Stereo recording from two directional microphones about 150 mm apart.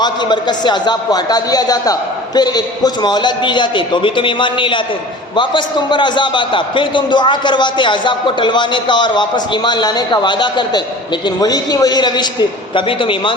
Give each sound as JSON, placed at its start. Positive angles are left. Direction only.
{"t": 0.0, "sound": "a man's voice", "side_deg": 30}